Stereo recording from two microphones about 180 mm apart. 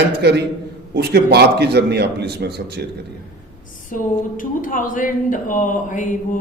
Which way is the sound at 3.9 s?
50° left (ahead or behind).